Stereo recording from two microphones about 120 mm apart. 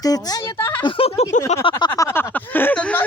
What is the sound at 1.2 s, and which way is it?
Speech, 65° left (ahead or behind).